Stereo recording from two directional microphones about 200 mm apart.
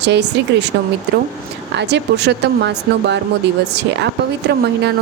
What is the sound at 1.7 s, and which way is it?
Speech, 60° right (ahead or behind).